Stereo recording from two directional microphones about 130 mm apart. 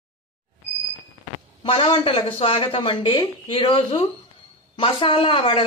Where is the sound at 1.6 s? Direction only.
40° left (ahead or behind).